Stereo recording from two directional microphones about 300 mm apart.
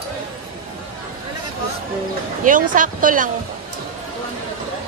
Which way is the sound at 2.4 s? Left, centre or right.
Right.